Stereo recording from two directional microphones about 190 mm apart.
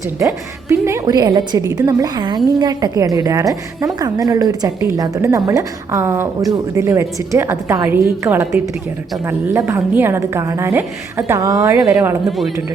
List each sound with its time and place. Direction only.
0.2 s a woman's voice: 15° right (ahead or behind)